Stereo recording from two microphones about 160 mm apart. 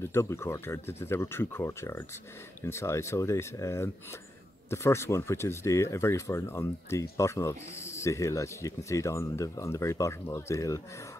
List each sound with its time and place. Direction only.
0.0 s speech: 15° left (ahead or behind)